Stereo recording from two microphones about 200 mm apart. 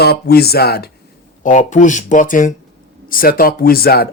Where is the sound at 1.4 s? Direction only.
40° left (ahead or behind).